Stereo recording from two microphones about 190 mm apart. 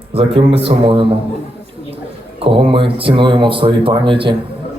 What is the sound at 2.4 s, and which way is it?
Speech, 30° right (ahead or behind).